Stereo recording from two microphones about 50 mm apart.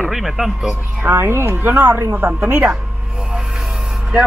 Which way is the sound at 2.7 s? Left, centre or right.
Centre.